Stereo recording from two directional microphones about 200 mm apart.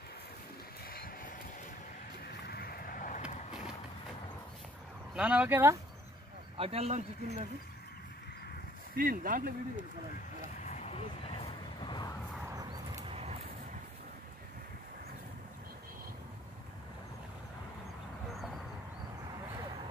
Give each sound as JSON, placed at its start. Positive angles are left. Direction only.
{"t": 0.8, "sound": "vehicle", "side_deg": 45}
{"t": 2.4, "sound": "boat", "side_deg": 50}
{"t": 5.1, "sound": "speech", "side_deg": -5}
{"t": 6.5, "sound": "speech", "side_deg": -30}
{"t": 8.9, "sound": "speech", "side_deg": -45}
{"t": 10.6, "sound": "vehicle", "side_deg": 30}
{"t": 12.4, "sound": "a sound", "side_deg": -15}
{"t": 13.1, "sound": "a sound", "side_deg": -30}